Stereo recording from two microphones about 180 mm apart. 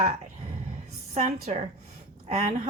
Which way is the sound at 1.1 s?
40° right (ahead or behind).